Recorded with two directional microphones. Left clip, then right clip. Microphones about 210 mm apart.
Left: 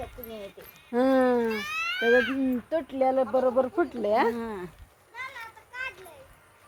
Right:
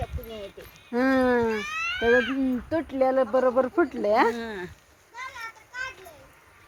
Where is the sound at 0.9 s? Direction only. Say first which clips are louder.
Even; 35° right (ahead or behind).